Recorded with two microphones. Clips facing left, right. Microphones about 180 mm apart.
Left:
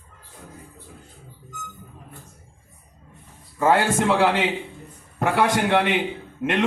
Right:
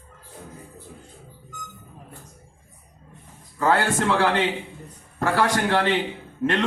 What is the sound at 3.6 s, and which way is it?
A man's voice, 20° left (ahead or behind).